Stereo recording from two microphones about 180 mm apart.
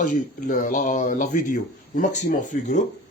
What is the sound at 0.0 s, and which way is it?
Speech, 45° left (ahead or behind).